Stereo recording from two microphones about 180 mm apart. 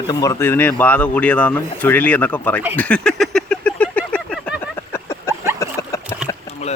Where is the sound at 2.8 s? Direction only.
5° left (ahead or behind).